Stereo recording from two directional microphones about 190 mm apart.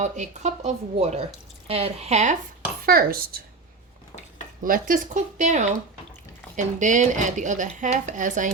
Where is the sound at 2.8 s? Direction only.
50° right (ahead or behind).